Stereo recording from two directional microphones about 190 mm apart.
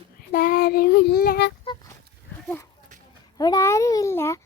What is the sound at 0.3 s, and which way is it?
Child singing, 50° left (ahead or behind).